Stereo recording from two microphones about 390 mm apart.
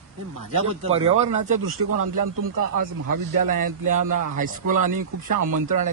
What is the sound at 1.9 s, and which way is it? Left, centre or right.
Speech, right.